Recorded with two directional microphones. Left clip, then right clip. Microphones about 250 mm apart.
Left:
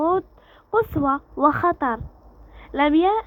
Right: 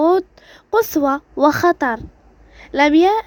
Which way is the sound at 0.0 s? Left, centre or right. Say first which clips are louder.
Right 6 dB; right.